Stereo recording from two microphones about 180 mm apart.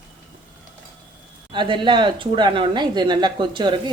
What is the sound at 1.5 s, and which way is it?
Speech, 25° right (ahead or behind).